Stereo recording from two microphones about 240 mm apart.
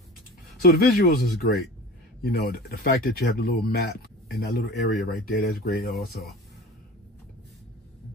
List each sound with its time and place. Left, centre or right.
0.6 s speech: left